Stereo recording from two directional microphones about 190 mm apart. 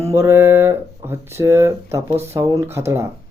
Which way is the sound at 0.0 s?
15° right (ahead or behind).